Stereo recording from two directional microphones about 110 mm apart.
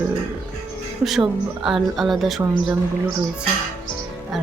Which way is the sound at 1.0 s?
5° right (ahead or behind).